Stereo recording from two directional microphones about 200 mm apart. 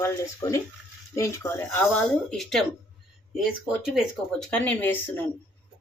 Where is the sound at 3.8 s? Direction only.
Centre (ahead or behind).